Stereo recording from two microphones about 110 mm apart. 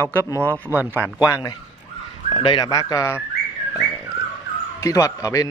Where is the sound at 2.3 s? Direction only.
50° left (ahead or behind).